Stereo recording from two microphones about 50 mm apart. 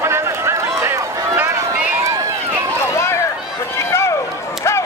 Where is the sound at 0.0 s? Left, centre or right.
Right.